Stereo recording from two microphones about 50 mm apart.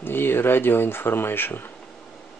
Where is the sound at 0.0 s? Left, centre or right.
Left.